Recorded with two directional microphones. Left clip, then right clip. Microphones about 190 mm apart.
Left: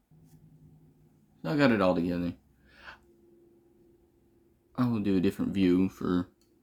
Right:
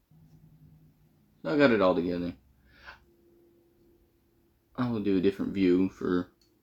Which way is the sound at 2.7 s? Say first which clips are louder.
Left 1 dB; 65° left (ahead or behind).